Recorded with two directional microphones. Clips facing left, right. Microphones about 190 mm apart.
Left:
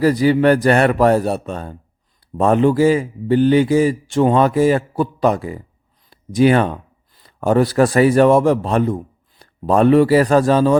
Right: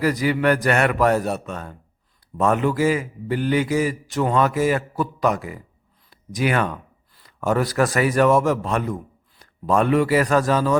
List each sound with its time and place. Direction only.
0.0 s a man's voice: 30° left (ahead or behind)